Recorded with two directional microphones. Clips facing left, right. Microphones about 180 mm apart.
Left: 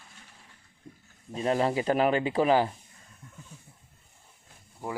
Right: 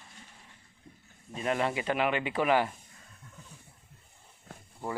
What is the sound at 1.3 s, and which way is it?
Speech, 30° left (ahead or behind).